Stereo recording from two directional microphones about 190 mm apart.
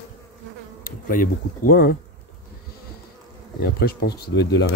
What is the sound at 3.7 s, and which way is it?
Speech, 55° left (ahead or behind).